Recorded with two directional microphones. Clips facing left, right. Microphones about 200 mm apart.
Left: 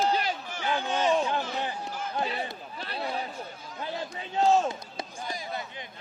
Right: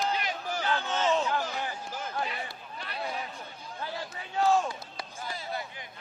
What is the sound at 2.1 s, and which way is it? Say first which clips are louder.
Chatter: left 5 dB; 30° left (ahead or behind).